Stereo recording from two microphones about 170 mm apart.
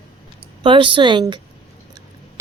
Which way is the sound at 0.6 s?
30° right (ahead or behind).